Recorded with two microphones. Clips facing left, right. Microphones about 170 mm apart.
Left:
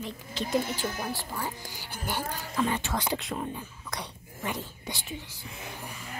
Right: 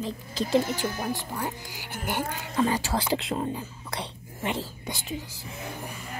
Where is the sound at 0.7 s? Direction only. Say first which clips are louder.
Right 3 dB; 15° right (ahead or behind).